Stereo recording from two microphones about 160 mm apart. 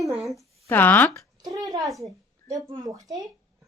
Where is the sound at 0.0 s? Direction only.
Centre (ahead or behind).